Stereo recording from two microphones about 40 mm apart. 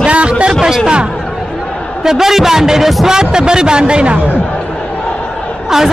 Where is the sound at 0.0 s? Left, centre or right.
Right.